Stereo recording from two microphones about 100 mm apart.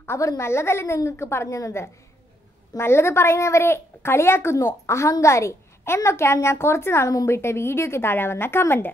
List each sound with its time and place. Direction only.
0.0 s a woman's voice: 25° left (ahead or behind)